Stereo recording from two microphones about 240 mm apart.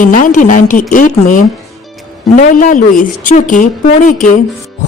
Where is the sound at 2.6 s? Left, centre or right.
Left.